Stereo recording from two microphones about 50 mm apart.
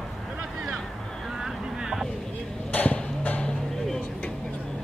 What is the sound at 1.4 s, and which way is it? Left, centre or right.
Vehicle, centre.